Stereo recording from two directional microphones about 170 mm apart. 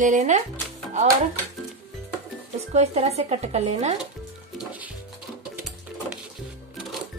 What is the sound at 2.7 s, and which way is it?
Speech, 40° right (ahead or behind).